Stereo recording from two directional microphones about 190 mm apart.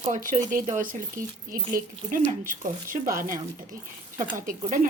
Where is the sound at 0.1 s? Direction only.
45° right (ahead or behind).